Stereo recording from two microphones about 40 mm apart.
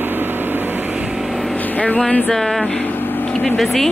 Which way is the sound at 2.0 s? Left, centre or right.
Left.